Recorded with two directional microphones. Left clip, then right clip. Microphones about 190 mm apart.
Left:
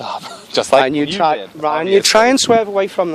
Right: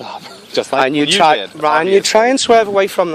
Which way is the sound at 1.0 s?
40° right (ahead or behind).